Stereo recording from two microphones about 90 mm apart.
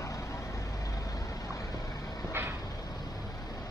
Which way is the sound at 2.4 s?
25° right (ahead or behind).